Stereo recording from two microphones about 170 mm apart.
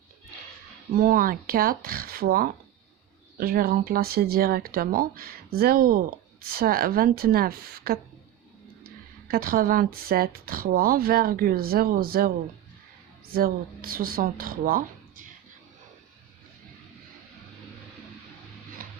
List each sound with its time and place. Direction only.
0.9 s speech: 55° right (ahead or behind)
9.2 s speech: 60° right (ahead or behind)
13.3 s speech: 60° right (ahead or behind)
18.8 s a sound: 55° right (ahead or behind)